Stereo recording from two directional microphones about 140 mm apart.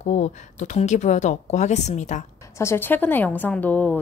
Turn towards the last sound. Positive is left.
turn(degrees=10)  # may be behind; listen again after turning